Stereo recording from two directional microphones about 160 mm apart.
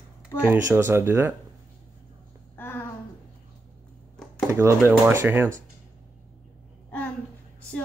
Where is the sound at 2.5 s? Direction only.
15° left (ahead or behind).